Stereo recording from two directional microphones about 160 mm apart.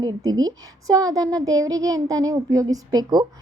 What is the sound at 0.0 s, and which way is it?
A child's voice, 25° right (ahead or behind).